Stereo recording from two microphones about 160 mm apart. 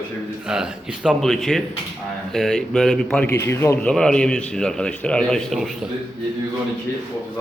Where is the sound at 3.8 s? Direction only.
5° left (ahead or behind).